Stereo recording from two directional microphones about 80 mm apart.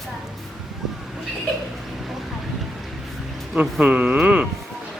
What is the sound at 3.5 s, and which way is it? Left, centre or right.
Speech, centre.